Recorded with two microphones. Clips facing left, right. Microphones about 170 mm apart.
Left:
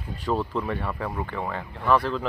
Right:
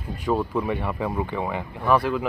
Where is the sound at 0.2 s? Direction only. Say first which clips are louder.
Right 3 dB; 10° right (ahead or behind).